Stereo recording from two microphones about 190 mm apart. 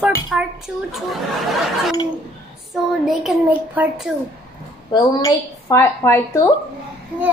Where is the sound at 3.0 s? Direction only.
Centre (ahead or behind).